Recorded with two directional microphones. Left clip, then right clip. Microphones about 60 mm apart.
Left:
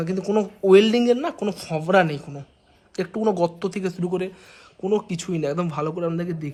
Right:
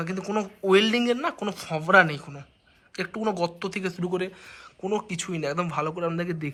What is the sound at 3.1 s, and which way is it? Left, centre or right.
Speech, left.